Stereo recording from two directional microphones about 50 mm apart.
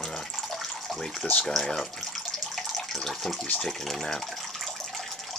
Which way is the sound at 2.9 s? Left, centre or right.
Centre.